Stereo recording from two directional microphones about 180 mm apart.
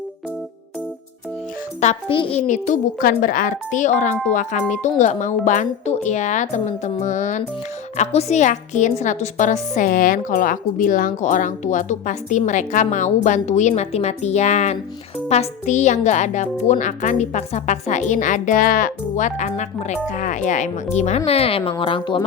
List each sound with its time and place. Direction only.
1.8 s a woman's voice: 40° left (ahead or behind)